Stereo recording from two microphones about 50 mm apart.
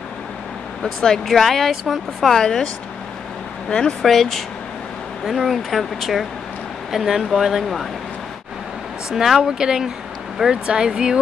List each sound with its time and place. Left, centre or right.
1.2 s speech: centre
2.1 s speech: centre
4.0 s speech: centre
5.3 s speech: centre
5.7 s speech: centre
9.1 s speech: centre